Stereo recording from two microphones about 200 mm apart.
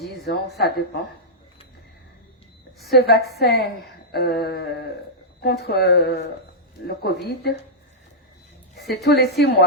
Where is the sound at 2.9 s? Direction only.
50° left (ahead or behind).